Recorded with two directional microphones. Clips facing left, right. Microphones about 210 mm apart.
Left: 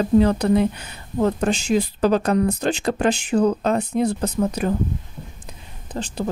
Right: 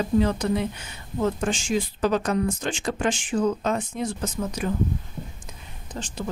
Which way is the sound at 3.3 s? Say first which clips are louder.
Left 4 dB; 65° left (ahead or behind).